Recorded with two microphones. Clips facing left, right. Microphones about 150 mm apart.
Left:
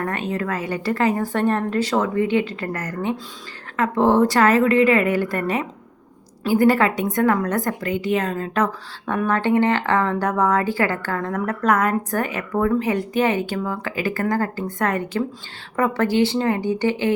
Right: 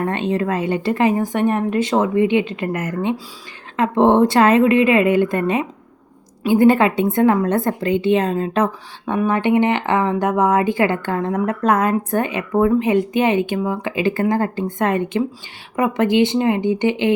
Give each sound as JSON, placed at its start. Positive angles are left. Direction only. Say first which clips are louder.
{"t": 0.0, "sound": "a woman's voice", "louder": "right 5 dB", "side_deg": -25}